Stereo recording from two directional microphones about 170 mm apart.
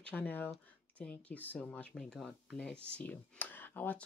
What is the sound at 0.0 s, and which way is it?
Speech, 10° left (ahead or behind).